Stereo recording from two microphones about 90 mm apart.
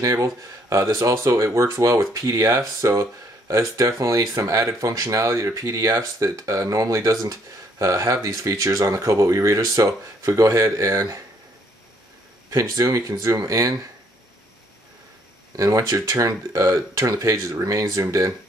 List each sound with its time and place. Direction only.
0.0 s speech: 40° right (ahead or behind)
12.4 s speech: 40° right (ahead or behind)
15.5 s speech: 40° right (ahead or behind)